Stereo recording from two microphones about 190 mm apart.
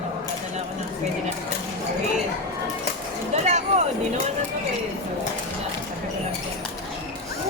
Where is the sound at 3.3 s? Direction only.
35° right (ahead or behind).